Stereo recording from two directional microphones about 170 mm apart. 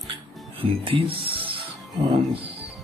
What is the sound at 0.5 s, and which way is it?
Music, 30° right (ahead or behind).